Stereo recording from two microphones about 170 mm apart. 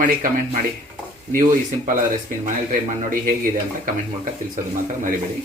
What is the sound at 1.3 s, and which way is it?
Speech, 50° right (ahead or behind).